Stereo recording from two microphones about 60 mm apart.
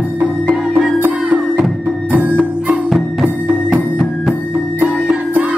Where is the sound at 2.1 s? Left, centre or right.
Right.